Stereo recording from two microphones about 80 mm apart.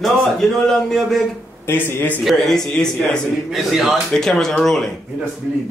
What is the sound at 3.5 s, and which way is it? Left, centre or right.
Speech, centre.